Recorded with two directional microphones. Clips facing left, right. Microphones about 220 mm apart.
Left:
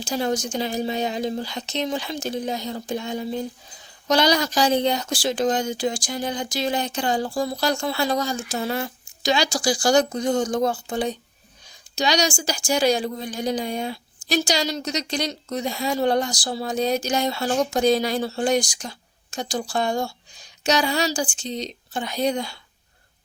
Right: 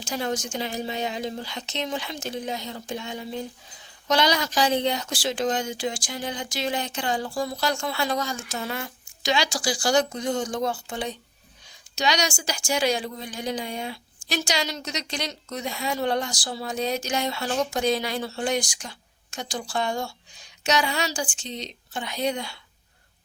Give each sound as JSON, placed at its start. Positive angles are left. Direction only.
{"t": 0.0, "sound": "speech", "side_deg": 35}